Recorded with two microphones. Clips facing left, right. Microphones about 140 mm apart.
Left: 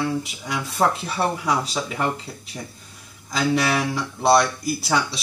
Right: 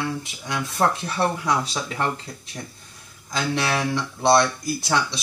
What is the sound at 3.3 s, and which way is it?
Speech, 5° left (ahead or behind).